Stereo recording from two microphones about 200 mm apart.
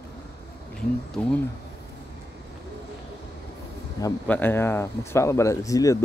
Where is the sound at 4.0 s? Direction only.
10° left (ahead or behind).